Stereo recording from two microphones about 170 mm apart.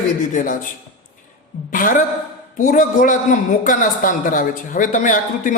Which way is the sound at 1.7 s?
55° left (ahead or behind).